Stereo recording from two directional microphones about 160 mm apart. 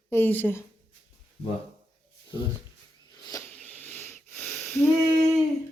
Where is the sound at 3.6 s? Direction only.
10° left (ahead or behind).